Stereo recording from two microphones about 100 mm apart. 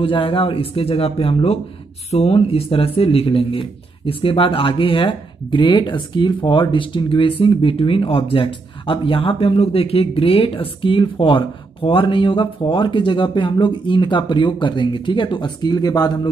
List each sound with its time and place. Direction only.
0.0 s speech: 65° left (ahead or behind); by 16.1 s 40° left (ahead or behind)